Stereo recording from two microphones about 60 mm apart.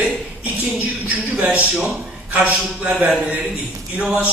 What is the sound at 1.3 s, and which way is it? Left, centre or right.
Speech, right.